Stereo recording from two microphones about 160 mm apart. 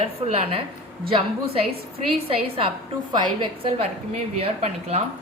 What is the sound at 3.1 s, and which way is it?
Speech, 30° right (ahead or behind).